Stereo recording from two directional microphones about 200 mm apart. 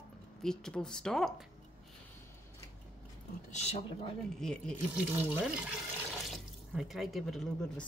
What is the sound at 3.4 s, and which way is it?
Speech, 35° left (ahead or behind).